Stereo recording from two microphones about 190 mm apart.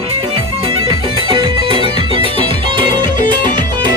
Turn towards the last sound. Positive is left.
turn(degrees=-25)  # may be behind; listen again after turning